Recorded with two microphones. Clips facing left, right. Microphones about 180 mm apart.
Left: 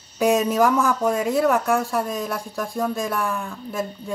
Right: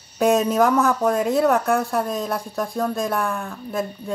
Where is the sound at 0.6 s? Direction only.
60° right (ahead or behind).